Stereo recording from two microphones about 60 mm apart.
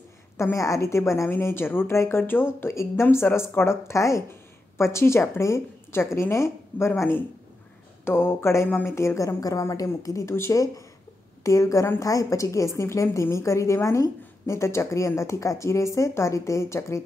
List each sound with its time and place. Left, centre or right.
0.4 s speech: left
1.3 s speech: left
2.7 s speech: left
8.0 s a woman's voice: left
10.2 s speech: left
11.4 s a woman's voice: left